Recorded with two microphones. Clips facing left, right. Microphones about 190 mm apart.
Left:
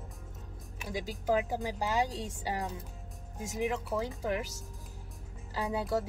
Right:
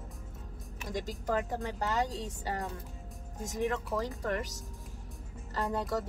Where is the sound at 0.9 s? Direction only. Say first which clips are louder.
Left 2 dB; 5° left (ahead or behind).